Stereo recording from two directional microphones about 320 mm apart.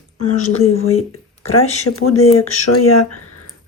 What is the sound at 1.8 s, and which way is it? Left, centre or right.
Speech, left.